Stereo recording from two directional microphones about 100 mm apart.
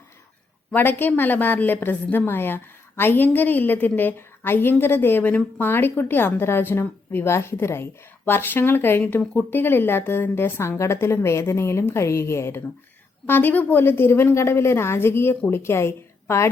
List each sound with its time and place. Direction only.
0.7 s a woman's voice: 20° left (ahead or behind)